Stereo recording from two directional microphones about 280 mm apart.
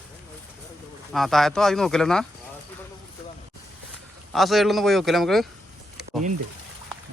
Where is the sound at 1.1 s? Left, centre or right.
Centre.